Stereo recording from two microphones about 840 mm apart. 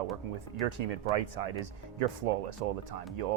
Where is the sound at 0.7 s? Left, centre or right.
Right.